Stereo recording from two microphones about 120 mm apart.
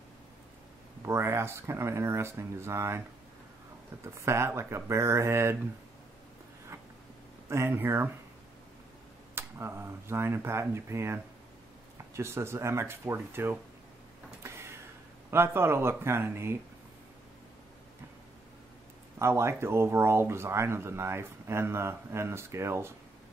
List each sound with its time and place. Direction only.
1.0 s speech: 20° right (ahead or behind)
4.0 s speech: 20° right (ahead or behind)
7.4 s speech: 20° right (ahead or behind)
9.3 s speech: 20° right (ahead or behind)
14.4 s a sound: 20° right (ahead or behind)
15.3 s speech: 20° right (ahead or behind)
19.1 s speech: 20° right (ahead or behind)